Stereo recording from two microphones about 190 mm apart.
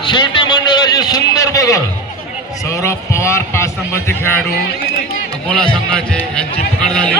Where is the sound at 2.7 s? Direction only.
15° left (ahead or behind).